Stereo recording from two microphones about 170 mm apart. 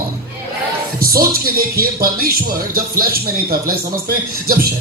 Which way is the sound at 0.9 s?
60° right (ahead or behind).